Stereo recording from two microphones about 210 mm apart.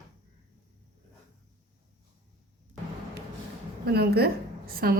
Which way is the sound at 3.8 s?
50° right (ahead or behind).